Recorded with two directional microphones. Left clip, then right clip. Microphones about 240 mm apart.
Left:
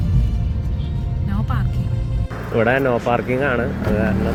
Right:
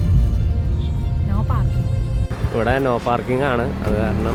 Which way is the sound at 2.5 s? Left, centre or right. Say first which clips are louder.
Left 2 dB; centre.